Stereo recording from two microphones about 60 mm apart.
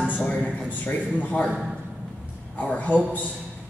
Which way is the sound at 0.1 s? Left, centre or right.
Left.